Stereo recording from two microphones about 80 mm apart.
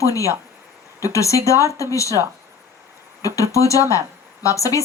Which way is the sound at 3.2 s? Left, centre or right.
Left.